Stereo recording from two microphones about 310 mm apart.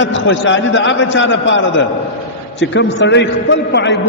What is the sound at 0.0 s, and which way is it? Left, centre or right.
A man's voice, left.